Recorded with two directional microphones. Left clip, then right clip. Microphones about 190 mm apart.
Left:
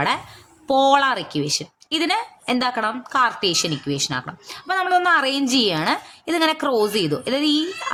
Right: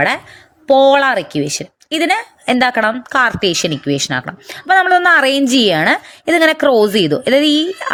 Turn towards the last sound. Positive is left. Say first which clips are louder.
# right 7 dB
turn(degrees=-35)  # may be behind; listen again after turning